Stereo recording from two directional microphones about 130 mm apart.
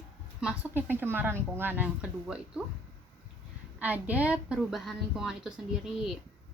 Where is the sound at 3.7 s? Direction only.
10° right (ahead or behind).